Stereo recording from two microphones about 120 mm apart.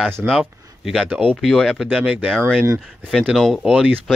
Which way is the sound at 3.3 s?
Centre (ahead or behind).